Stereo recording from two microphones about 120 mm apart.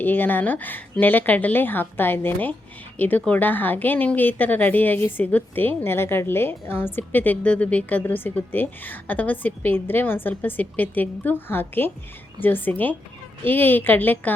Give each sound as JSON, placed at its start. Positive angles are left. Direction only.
{"t": 0.0, "sound": "a woman's voice", "side_deg": 15}